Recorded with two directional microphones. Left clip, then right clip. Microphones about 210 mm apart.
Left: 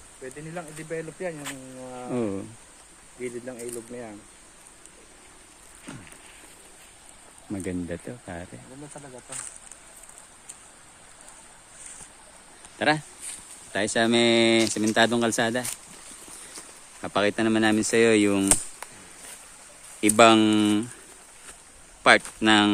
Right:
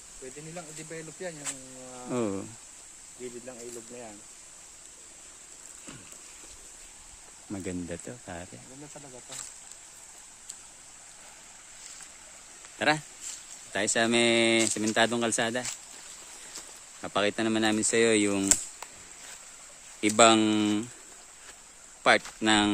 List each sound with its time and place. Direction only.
0.5 s speech: 10° left (ahead or behind)
2.1 s speech: 25° right (ahead or behind)
7.5 s speech: 10° right (ahead or behind)
12.8 s speech: 5° right (ahead or behind)
18.8 s chop: centre (ahead or behind)
20.0 s speech: 5° right (ahead or behind)
22.0 s speech: 10° right (ahead or behind)